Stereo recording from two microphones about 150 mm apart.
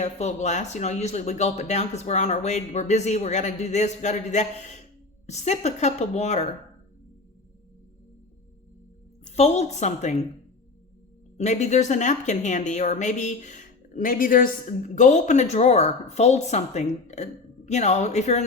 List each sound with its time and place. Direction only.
0.0 s a woman's voice: 50° left (ahead or behind)
9.3 s a woman's voice: 45° left (ahead or behind)
11.3 s a woman's voice: 50° left (ahead or behind)